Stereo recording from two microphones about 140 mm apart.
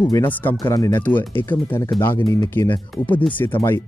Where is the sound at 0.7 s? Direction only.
25° left (ahead or behind).